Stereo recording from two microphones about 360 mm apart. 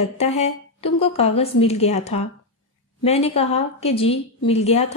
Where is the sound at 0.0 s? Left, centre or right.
Centre.